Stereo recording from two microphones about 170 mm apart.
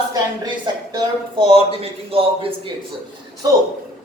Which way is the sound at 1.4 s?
35° right (ahead or behind).